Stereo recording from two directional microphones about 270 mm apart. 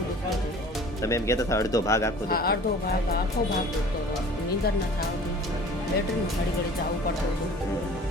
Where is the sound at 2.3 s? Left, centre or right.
Left.